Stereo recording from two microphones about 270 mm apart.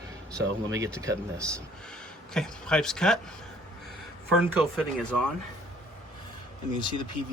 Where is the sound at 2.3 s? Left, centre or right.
Centre.